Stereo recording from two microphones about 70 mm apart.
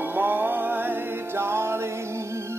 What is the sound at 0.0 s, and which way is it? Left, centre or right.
Music, right.